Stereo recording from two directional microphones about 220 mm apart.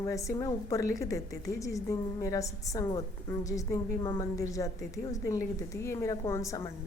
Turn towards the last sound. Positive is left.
turn(degrees=15)  # may be behind; listen again after turning